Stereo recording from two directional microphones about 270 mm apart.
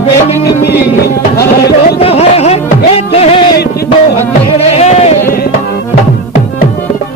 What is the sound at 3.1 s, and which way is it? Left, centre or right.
Music, left.